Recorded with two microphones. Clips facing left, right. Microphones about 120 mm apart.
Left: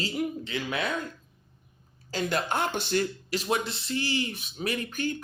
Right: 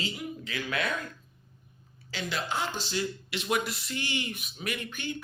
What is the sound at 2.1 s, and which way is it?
Speech, 45° left (ahead or behind).